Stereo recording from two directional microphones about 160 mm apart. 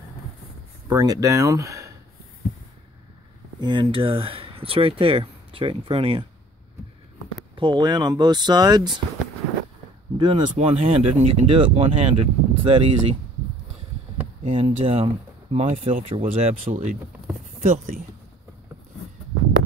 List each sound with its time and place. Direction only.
0.8 s speech: 25° right (ahead or behind)
3.6 s speech: 30° right (ahead or behind)
7.5 s speech: 30° right (ahead or behind)
10.1 s speech: 30° right (ahead or behind)
14.4 s speech: 35° right (ahead or behind)
16.6 s speech: 55° right (ahead or behind)